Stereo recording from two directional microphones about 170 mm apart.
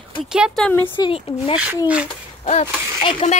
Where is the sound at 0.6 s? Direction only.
10° left (ahead or behind).